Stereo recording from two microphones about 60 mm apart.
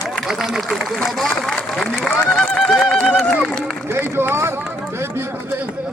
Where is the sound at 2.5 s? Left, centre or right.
Centre.